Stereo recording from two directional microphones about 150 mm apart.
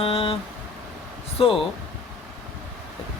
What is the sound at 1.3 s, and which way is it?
Speech, 35° left (ahead or behind).